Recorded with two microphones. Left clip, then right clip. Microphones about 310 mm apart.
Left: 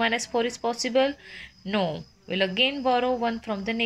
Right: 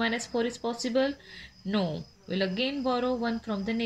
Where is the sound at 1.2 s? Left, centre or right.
Centre.